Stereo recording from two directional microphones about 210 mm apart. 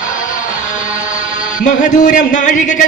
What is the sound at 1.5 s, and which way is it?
A man's voice, 35° left (ahead or behind).